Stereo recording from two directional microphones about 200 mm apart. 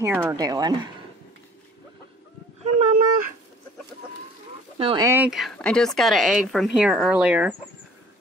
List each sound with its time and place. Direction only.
0.0 s speech: 10° right (ahead or behind)
2.6 s speech: 40° right (ahead or behind)
4.7 s speech: 30° right (ahead or behind)
5.0 s speech: 10° right (ahead or behind)